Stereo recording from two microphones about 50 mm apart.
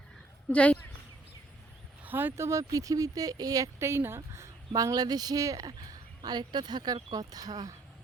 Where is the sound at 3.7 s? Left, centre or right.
Right.